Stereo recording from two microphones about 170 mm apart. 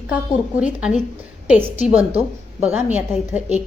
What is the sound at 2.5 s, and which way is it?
A woman's voice, 10° right (ahead or behind).